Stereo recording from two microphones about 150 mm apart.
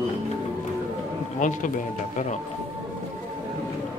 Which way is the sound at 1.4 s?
60° left (ahead or behind).